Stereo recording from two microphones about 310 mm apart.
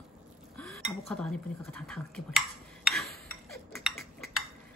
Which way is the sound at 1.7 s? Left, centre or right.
Centre.